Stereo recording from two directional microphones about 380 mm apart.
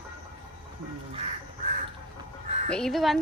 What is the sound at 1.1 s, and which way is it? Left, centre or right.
Duck, centre.